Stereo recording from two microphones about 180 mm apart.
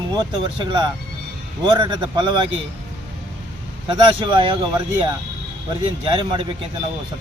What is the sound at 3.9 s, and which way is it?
Speech, 25° right (ahead or behind).